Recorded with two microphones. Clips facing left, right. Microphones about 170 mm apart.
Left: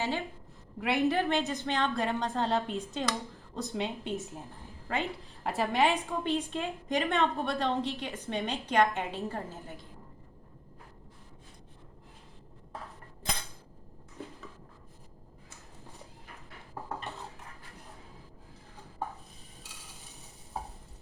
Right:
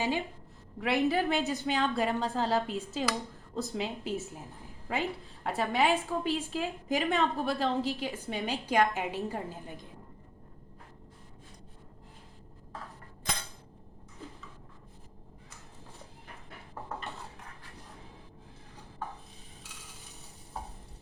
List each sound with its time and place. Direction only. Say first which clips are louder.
0.0 s a woman's voice: right 2 dB; 20° right (ahead or behind)
0.8 s a woman's voice: even; centre (ahead or behind); by 9.8 s 15° right (ahead or behind)